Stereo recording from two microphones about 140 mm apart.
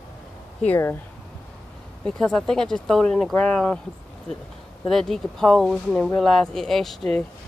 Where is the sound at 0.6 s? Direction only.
15° left (ahead or behind).